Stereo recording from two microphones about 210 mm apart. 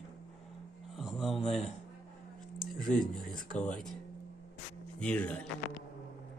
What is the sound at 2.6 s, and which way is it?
Speech, centre (ahead or behind).